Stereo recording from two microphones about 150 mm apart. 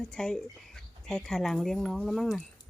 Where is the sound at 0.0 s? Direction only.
5° left (ahead or behind).